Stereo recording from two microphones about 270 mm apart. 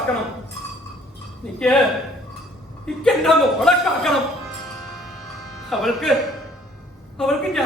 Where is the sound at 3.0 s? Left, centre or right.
Centre.